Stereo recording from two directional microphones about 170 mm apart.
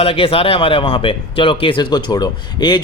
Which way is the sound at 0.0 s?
35° left (ahead or behind).